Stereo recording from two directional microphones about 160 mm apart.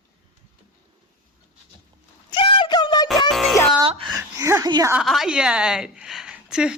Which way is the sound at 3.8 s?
35° right (ahead or behind).